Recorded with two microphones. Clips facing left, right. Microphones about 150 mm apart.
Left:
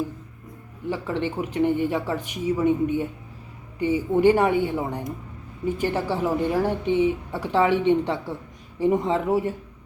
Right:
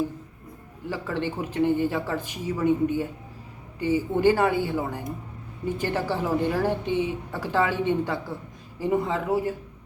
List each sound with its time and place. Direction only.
0.9 s speech: 15° left (ahead or behind)